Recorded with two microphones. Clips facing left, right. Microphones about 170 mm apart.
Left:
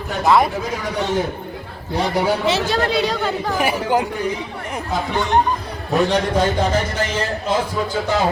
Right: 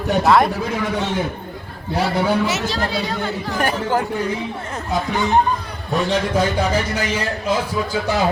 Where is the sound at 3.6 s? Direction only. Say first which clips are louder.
Even; 10° left (ahead or behind).